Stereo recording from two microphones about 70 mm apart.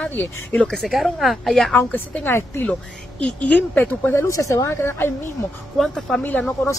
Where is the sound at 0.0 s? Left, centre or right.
Left.